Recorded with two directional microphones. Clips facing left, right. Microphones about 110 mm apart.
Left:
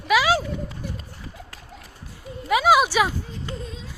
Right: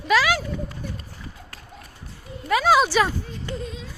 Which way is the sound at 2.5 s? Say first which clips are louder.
Even; 10° left (ahead or behind).